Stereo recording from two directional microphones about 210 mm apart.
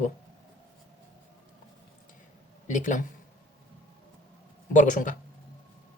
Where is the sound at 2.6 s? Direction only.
35° left (ahead or behind).